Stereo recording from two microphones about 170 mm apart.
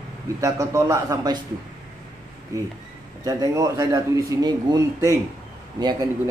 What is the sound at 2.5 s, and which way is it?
A man's voice, 20° right (ahead or behind).